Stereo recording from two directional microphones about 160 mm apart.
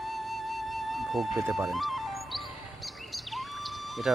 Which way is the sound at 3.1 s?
Centre (ahead or behind).